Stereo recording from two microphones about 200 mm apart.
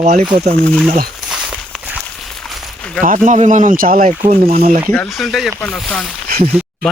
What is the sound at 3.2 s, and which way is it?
Speech, 40° right (ahead or behind).